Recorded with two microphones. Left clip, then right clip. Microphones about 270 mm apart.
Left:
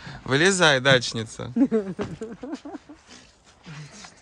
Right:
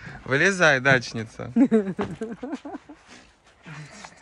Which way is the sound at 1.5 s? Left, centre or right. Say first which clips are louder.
Right 2 dB; right.